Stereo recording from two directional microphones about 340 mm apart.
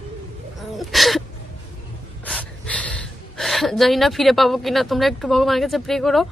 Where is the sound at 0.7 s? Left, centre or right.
Centre.